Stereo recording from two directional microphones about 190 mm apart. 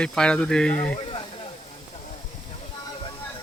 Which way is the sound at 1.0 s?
30° left (ahead or behind).